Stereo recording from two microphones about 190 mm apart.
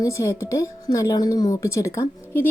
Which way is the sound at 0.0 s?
15° left (ahead or behind).